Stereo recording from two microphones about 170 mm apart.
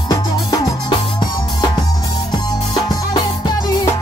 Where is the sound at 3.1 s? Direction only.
25° left (ahead or behind).